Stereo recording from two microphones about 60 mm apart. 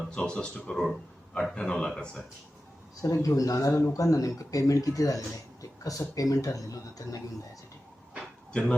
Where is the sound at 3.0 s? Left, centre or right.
Left.